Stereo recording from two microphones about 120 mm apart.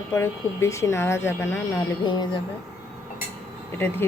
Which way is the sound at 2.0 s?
40° left (ahead or behind).